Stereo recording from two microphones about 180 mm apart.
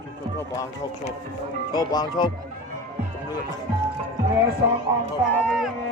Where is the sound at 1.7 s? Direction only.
20° left (ahead or behind).